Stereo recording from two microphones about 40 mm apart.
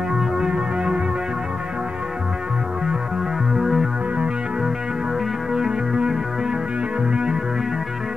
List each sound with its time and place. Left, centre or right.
0.1 s music: centre
3.5 s music: centre
5.5 s music: centre